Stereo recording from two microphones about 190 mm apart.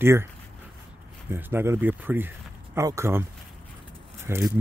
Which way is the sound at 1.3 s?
10° right (ahead or behind).